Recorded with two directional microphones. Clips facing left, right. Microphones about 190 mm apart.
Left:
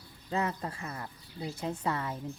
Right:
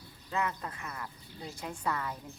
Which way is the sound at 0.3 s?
30° left (ahead or behind).